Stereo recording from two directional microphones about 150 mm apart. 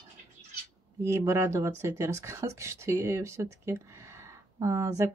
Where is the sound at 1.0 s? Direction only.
20° right (ahead or behind).